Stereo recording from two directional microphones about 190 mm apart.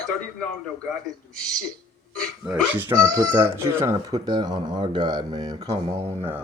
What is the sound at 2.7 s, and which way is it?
Speech, 10° right (ahead or behind).